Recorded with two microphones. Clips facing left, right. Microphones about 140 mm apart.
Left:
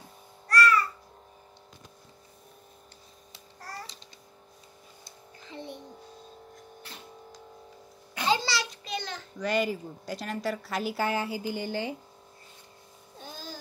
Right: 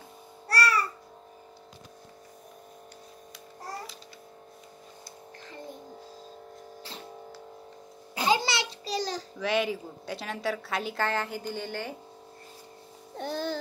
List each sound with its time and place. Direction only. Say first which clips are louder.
0.5 s babbling: left 3 dB; 35° right (ahead or behind)
8.3 s a sound: right 1 dB; 20° right (ahead or behind)
9.4 s a woman's voice: even; centre (ahead or behind)
13.2 s music: right 11 dB; 65° right (ahead or behind)